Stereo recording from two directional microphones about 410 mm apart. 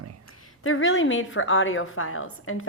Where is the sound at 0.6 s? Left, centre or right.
Left.